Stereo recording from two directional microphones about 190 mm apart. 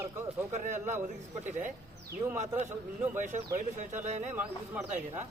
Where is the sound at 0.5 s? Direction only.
40° right (ahead or behind).